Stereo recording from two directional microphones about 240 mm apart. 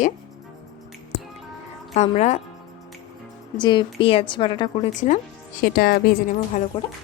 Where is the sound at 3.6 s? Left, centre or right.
Centre.